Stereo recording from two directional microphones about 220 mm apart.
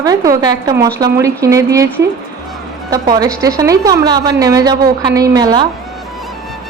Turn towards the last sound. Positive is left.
turn(degrees=-20)  # may be behind; listen again after turning